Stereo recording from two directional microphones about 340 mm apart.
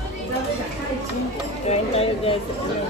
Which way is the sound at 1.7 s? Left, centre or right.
Centre.